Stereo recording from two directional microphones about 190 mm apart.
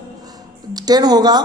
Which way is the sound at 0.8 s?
20° right (ahead or behind).